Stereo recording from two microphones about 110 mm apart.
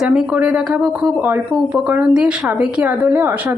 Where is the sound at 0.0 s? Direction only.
10° right (ahead or behind).